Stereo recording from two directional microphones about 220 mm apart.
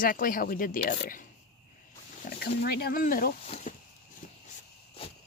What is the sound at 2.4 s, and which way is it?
Speech, 45° left (ahead or behind).